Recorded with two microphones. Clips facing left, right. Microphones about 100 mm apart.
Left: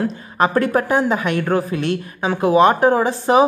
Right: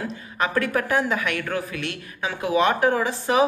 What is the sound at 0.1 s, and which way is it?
Speech, 35° left (ahead or behind).